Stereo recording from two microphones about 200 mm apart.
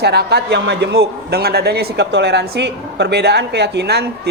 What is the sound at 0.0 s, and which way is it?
A man's voice, 55° right (ahead or behind).